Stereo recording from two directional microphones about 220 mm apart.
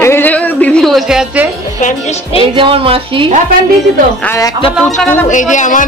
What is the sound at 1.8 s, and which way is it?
Speech, 35° left (ahead or behind).